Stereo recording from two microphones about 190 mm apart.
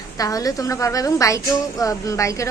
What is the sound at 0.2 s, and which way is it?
A woman's voice, 20° left (ahead or behind).